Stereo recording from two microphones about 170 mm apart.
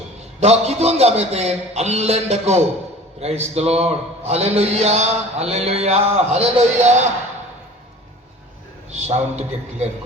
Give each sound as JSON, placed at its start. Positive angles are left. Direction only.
{"t": 0.3, "sound": "mantra", "side_deg": -40}
{"t": 8.9, "sound": "mantra", "side_deg": -40}